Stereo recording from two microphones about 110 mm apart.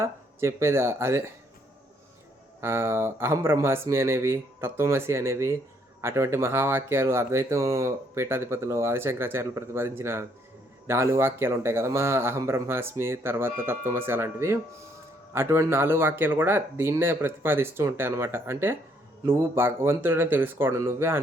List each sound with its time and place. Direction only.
0.0 s speech: 25° right (ahead or behind)
2.6 s speech: 25° right (ahead or behind)